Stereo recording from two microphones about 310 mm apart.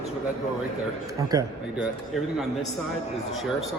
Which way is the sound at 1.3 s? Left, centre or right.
Centre.